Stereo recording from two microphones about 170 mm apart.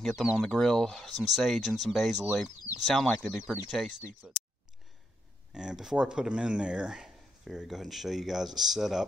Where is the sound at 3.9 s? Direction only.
45° right (ahead or behind).